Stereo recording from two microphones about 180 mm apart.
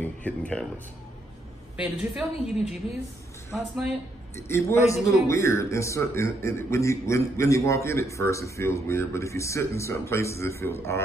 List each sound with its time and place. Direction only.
0.0 s a man's voice: 10° left (ahead or behind)
1.8 s a woman's voice: 5° right (ahead or behind)
3.5 s a woman's voice: centre (ahead or behind)
4.4 s a man's voice: 15° left (ahead or behind)